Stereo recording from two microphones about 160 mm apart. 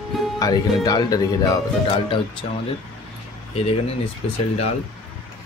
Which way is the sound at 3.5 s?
40° left (ahead or behind).